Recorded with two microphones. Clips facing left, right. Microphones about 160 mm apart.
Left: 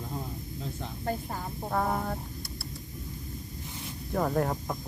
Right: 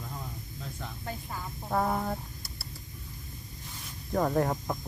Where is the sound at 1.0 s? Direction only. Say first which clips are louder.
Left 7 dB; 40° left (ahead or behind).